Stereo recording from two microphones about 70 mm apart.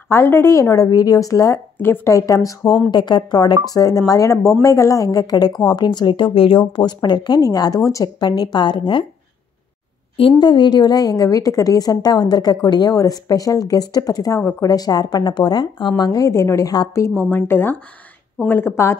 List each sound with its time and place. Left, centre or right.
0.1 s speech: left
0.6 s a woman's voice: left
1.5 s speech: left
2.0 s speech: left
2.9 s a woman's voice: left
3.6 s a woman's voice: left
7.4 s speech: left
8.2 s speech: left
10.4 s a woman's voice: left
12.9 s a woman's voice: left
16.0 s a woman's voice: left
17.2 s speech: left